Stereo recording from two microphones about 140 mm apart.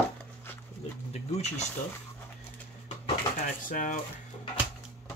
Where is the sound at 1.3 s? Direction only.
50° left (ahead or behind).